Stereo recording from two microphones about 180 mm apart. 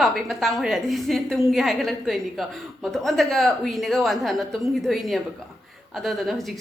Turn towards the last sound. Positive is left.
turn(degrees=0)  # may be behind; listen again after turning